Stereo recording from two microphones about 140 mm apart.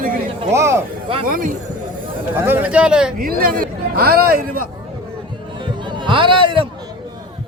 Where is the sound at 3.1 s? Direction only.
90° right.